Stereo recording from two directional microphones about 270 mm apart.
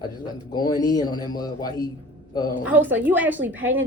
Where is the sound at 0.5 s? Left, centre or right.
Centre.